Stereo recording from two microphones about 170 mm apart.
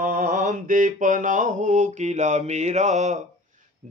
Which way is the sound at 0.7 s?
50° right (ahead or behind).